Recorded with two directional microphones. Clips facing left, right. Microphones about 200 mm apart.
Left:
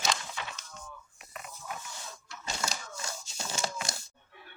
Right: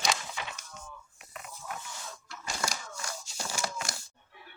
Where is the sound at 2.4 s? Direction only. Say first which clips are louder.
Right 1 dB; 25° left (ahead or behind).